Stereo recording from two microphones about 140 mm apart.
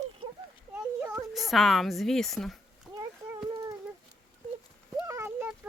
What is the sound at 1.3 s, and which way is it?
A woman's voice, centre (ahead or behind).